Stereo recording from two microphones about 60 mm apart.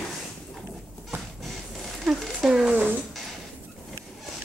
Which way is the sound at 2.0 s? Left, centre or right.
Centre.